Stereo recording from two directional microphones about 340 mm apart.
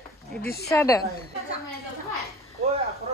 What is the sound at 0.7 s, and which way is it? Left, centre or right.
Speech, centre.